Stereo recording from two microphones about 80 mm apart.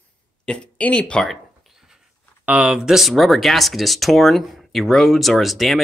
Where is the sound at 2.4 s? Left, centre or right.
Centre.